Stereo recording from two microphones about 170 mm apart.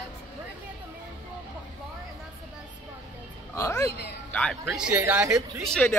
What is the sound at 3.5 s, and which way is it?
Speech, 15° left (ahead or behind).